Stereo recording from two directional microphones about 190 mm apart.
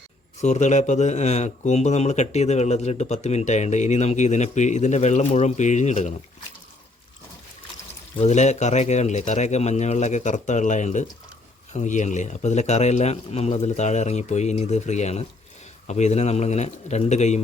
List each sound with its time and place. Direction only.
0.4 s speech: 35° left (ahead or behind)
8.2 s speech: 35° left (ahead or behind)